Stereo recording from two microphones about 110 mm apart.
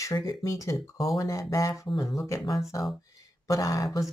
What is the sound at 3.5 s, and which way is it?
Speech, 30° left (ahead or behind).